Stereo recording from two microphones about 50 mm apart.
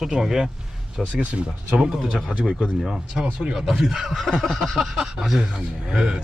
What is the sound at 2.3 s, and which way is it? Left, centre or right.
Speech, centre.